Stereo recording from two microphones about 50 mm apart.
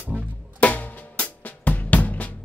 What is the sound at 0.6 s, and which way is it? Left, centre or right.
Drum kit, left.